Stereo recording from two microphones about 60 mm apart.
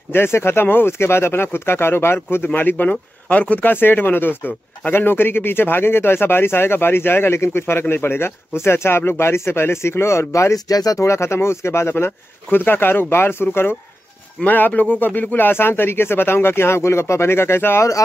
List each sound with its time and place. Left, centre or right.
0.1 s speech: left
10.5 s speech: left
11.1 s speech: left
12.4 s speech: left
14.4 s speech: left